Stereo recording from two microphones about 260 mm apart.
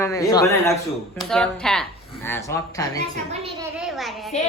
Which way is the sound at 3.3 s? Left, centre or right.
Right.